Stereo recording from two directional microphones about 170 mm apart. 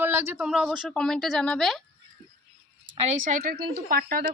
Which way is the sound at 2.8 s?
40° right (ahead or behind).